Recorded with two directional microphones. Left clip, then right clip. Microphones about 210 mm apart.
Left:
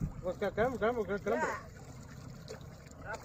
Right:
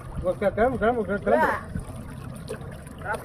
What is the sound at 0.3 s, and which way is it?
Speech, 40° left (ahead or behind).